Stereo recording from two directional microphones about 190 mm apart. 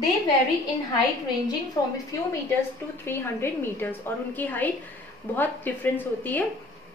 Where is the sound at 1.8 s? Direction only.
20° left (ahead or behind).